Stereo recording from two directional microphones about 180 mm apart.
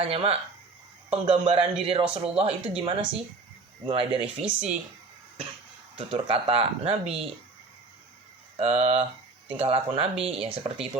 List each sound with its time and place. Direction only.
0.0 s speech: 35° right (ahead or behind)
4.4 s speech: 5° right (ahead or behind)
6.0 s speech: 30° right (ahead or behind)
8.5 s speech: 35° right (ahead or behind)